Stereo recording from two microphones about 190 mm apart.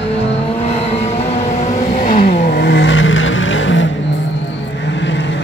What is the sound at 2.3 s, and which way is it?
Vehicle, 60° left (ahead or behind).